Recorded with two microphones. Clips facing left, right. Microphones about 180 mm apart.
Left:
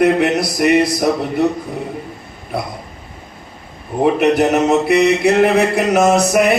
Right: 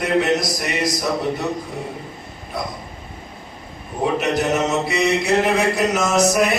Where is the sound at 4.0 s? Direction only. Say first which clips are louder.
Left 7 dB; 60° left (ahead or behind).